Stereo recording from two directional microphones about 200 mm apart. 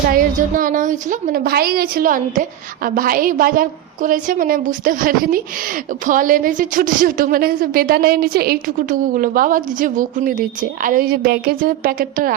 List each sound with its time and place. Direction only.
0.1 s a woman's voice: 45° right (ahead or behind)